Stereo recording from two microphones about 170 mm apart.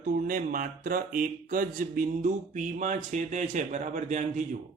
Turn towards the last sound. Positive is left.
turn(degrees=-45)  # may be behind; listen again after turning